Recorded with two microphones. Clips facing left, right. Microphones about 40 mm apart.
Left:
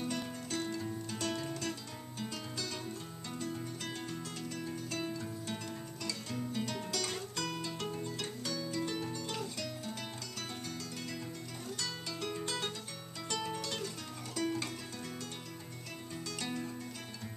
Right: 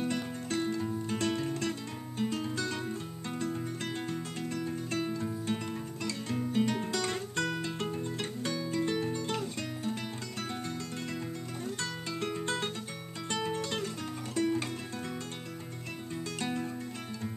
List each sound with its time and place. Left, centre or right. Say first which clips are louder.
0.0 s music: right 5 dB; right
11.6 s music: right 3 dB; right
16.3 s music: right 5 dB; right